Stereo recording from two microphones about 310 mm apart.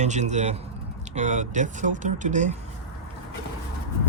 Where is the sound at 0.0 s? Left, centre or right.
Right.